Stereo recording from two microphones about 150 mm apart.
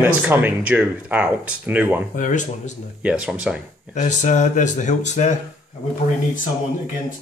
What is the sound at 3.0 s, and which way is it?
Speech, 5° right (ahead or behind).